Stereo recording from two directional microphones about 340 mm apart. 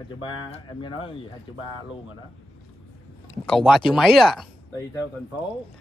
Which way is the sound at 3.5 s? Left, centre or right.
Centre.